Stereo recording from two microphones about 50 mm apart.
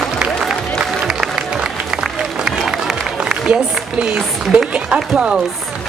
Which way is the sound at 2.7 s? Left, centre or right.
Centre.